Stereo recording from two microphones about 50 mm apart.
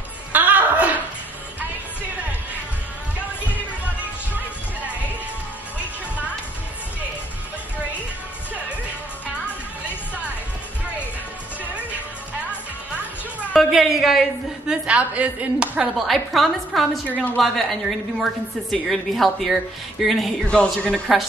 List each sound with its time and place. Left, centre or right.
0.3 s chuckle: right
12.4 s music: right
13.6 s a sound: centre
14.7 s speech: right
16.0 s a woman's voice: centre
20.4 s a man's voice: centre